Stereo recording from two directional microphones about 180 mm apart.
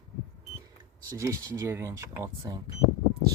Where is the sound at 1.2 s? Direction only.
15° right (ahead or behind).